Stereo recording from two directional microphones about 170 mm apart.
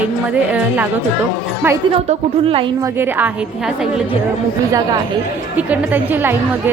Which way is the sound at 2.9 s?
10° right (ahead or behind).